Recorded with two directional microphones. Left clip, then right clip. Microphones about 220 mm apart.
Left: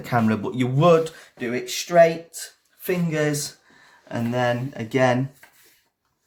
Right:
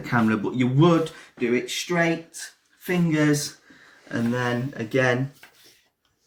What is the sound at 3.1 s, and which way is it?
Speech, 45° left (ahead or behind).